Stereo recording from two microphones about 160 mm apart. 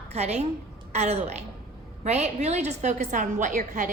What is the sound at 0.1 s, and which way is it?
A woman's voice, 40° right (ahead or behind).